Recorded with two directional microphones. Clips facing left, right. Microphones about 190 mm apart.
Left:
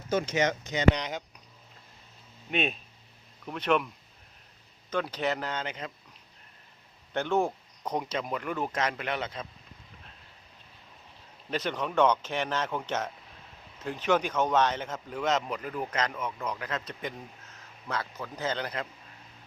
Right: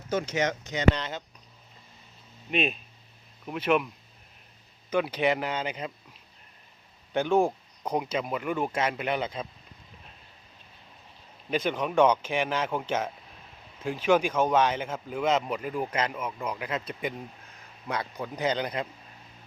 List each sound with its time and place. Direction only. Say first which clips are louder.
0.1 s speech: left 1 dB; 25° left (ahead or behind)
2.5 s speech: right 2 dB; centre (ahead or behind)
4.9 s speech: right 4 dB; 10° right (ahead or behind)
7.1 s speech: right 4 dB; 10° right (ahead or behind)
11.5 s speech: right 3 dB; 10° right (ahead or behind)